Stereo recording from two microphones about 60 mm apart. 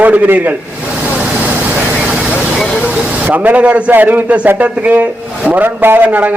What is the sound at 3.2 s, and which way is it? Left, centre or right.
A man's voice, right.